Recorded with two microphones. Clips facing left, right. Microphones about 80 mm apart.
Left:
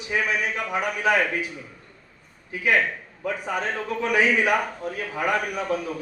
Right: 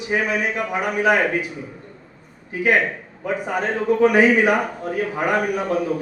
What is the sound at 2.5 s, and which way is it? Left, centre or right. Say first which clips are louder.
Speech: right 4 dB; right.